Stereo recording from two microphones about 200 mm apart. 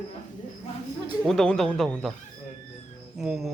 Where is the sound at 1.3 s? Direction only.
Centre (ahead or behind).